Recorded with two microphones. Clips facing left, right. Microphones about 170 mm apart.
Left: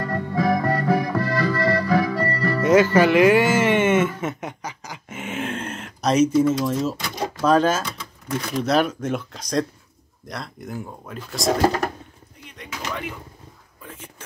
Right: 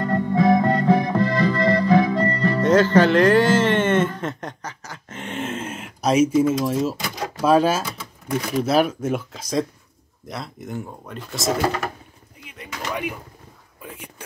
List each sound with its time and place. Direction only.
0.0 s music: 20° right (ahead or behind)
2.6 s speech: 10° left (ahead or behind)
12.4 s artillery fire: 10° right (ahead or behind)
13.9 s a sound: 15° right (ahead or behind)